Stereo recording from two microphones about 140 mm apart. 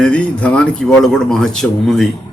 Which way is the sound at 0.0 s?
10° left (ahead or behind).